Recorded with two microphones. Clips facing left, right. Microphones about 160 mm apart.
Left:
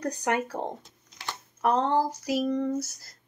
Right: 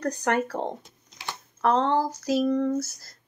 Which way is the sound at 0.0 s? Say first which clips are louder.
Right 2 dB; 10° left (ahead or behind).